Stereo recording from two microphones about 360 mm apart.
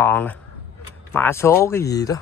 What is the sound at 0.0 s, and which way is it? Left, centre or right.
Speech, centre.